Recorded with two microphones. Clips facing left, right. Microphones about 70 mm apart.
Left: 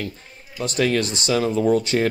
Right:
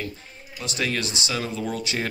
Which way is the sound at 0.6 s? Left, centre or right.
Left.